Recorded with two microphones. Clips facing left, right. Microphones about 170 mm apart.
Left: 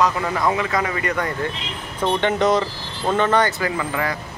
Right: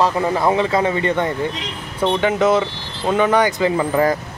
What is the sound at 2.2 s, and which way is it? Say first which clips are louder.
Speech: right 2 dB; 5° right (ahead or behind).